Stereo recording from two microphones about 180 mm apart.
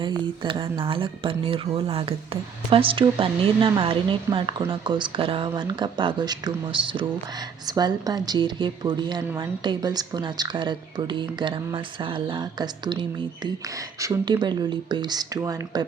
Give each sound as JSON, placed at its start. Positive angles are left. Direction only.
{"t": 0.4, "sound": "speech", "side_deg": -25}